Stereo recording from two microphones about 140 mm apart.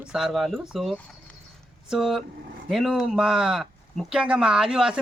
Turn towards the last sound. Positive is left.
turn(degrees=-5)  # may be behind; listen again after turning